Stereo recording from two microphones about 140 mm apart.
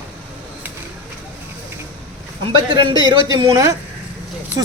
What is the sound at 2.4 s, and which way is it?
A man's voice, 35° right (ahead or behind).